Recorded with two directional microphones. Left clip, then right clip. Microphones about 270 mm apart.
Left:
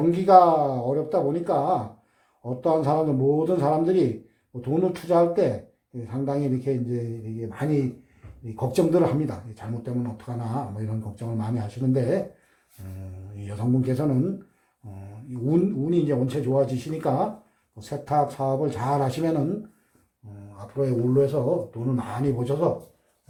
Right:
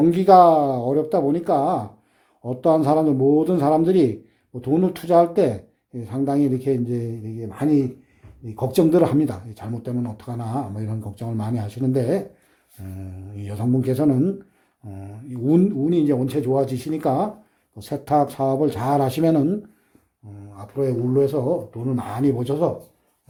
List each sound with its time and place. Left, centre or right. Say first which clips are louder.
0.1 s speech: right 2 dB; right
13.3 s speech: right 3 dB; right
15.3 s speech: right 4 dB; right
20.7 s speech: right 2 dB; right